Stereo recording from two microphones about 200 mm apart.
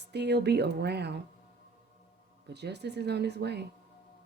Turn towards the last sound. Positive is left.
turn(degrees=-55)  # may be behind; listen again after turning